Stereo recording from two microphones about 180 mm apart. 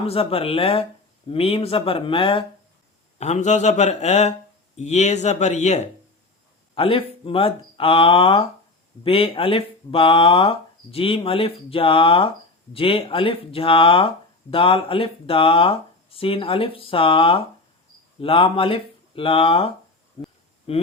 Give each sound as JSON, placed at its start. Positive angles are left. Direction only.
{"t": 0.0, "sound": "speech", "side_deg": 30}
{"t": 20.2, "sound": "a sound", "side_deg": 35}
{"t": 20.7, "sound": "speech", "side_deg": 35}